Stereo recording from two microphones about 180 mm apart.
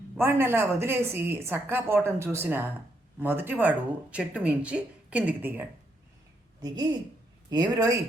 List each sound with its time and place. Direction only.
0.2 s a woman's voice: 15° right (ahead or behind)
6.6 s speech: 20° right (ahead or behind)